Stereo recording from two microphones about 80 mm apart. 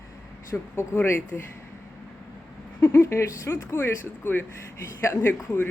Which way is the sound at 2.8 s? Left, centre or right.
Left.